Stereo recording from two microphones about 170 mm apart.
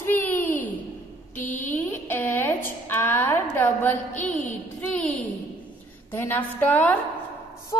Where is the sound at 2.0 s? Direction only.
10° left (ahead or behind).